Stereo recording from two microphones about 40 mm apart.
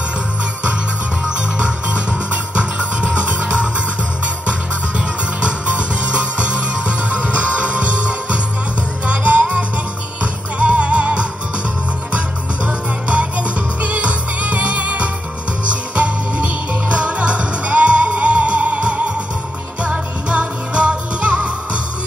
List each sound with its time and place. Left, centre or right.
2.5 s music: right
4.5 s music: right
10.6 s music: right
12.6 s music: right